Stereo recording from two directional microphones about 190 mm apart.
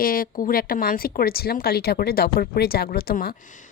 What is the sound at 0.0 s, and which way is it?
Speech, 50° left (ahead or behind).